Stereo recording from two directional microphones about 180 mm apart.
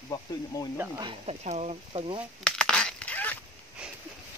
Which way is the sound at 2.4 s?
5° left (ahead or behind).